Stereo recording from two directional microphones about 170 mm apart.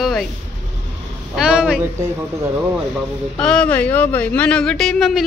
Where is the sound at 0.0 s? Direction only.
Centre (ahead or behind).